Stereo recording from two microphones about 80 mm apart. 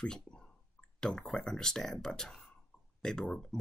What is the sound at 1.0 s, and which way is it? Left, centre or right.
Speech, centre.